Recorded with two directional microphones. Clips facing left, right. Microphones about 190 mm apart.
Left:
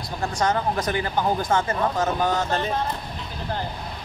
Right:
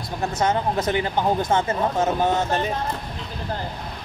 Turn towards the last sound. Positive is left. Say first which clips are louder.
# right 2 dB
turn(degrees=-25)  # may be behind; listen again after turning